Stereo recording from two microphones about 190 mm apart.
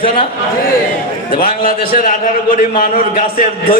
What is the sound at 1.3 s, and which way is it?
A man's voice, 50° left (ahead or behind).